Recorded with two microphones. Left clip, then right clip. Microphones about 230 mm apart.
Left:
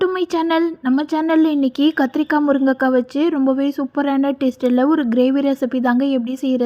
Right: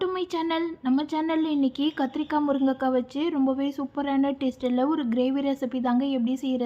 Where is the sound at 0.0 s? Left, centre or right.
Left.